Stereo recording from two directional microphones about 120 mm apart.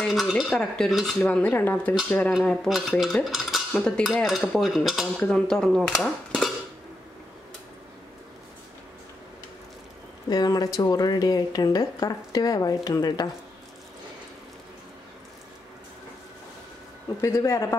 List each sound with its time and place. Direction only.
0.0 s speech: centre (ahead or behind)
2.5 s cutlery: centre (ahead or behind)
10.3 s speech: 35° left (ahead or behind)
17.2 s speech: 25° left (ahead or behind)